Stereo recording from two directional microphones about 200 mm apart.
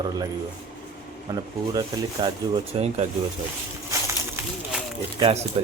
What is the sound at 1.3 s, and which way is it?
Speech, 15° right (ahead or behind).